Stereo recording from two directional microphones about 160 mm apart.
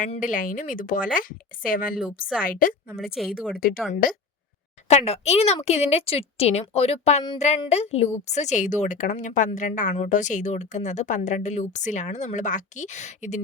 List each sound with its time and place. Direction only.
0.2 s speech: 55° left (ahead or behind)
3.2 s speech: centre (ahead or behind)
4.9 s a woman's voice: 40° left (ahead or behind)